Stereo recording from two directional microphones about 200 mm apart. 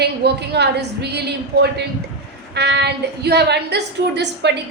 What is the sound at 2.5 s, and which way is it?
A woman's voice, 60° right (ahead or behind).